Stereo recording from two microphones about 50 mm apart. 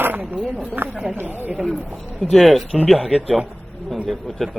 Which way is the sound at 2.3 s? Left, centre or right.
Centre.